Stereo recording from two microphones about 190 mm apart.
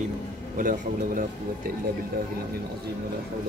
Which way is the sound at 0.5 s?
45° right (ahead or behind).